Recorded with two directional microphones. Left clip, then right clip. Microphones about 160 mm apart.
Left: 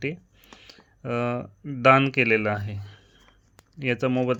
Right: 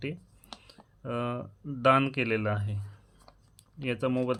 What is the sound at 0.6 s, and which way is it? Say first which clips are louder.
Speech: left 9 dB; 35° left (ahead or behind).